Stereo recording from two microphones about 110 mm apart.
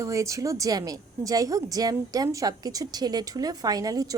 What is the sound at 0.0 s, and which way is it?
A woman's voice, 30° right (ahead or behind).